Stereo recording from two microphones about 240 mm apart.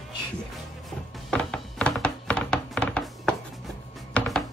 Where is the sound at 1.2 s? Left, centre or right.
Centre.